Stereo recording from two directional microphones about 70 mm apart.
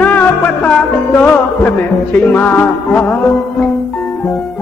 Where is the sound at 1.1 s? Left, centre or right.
Left.